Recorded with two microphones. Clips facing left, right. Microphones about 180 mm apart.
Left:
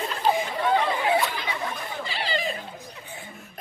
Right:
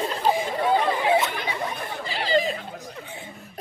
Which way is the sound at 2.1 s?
40° right (ahead or behind).